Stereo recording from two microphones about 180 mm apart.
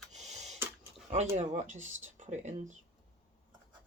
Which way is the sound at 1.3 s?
40° right (ahead or behind).